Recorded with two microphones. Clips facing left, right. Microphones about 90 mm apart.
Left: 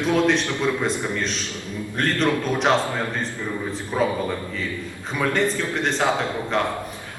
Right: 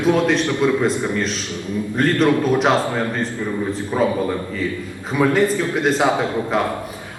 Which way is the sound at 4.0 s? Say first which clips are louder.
Right 3 dB; centre (ahead or behind).